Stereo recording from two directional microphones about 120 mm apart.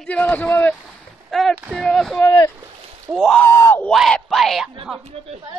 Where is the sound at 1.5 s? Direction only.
15° right (ahead or behind).